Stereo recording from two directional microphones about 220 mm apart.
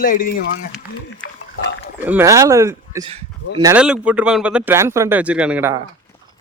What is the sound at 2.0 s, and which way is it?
Speech, 10° right (ahead or behind).